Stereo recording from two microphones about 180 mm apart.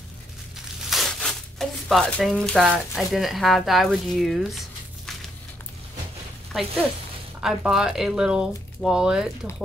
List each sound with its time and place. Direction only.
0.8 s speech: centre (ahead or behind)
7.3 s speech: 5° right (ahead or behind)